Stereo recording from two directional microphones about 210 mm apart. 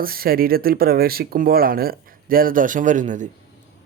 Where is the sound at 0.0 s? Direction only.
45° right (ahead or behind).